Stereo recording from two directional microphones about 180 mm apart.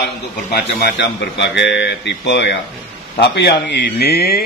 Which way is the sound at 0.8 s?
75° left (ahead or behind).